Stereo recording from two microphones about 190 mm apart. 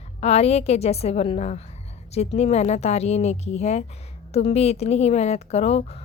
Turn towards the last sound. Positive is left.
turn(degrees=35)  # may be behind; listen again after turning